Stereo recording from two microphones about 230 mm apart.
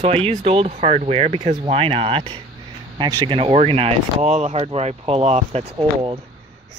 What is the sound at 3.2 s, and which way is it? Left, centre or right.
Speech, right.